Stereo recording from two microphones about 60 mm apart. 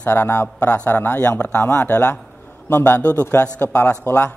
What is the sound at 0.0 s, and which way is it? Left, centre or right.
A man's voice, left.